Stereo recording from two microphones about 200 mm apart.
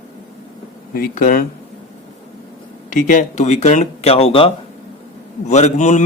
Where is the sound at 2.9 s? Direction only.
40° left (ahead or behind).